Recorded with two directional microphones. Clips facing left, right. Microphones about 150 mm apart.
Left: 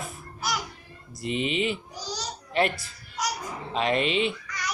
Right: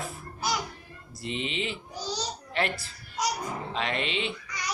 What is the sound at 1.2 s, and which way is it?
Mantra, 15° left (ahead or behind).